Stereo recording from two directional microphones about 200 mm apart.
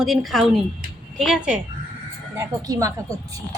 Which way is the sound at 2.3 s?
15° right (ahead or behind).